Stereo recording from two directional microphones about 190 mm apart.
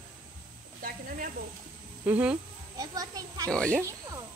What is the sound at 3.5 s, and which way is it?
Speech, 5° left (ahead or behind).